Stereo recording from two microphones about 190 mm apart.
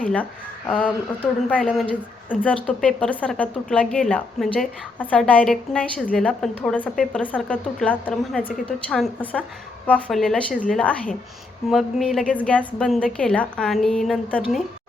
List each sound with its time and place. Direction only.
0.7 s a woman's voice: 5° left (ahead or behind)